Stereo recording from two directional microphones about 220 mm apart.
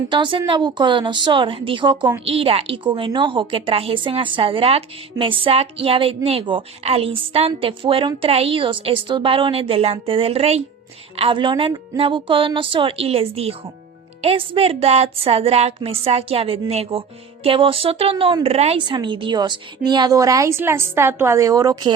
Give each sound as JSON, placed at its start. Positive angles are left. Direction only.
{"t": 0.1, "sound": "a woman's voice", "side_deg": -20}